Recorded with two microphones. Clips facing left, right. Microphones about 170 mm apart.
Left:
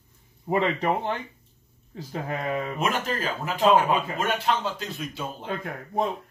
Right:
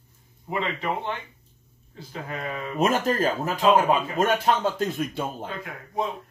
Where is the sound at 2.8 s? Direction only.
40° right (ahead or behind).